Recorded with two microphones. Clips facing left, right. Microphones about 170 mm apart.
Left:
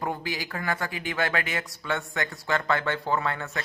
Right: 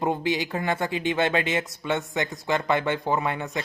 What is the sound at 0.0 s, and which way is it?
Speech, 20° right (ahead or behind).